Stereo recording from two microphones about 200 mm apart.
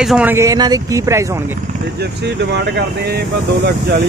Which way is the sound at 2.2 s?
55° right (ahead or behind).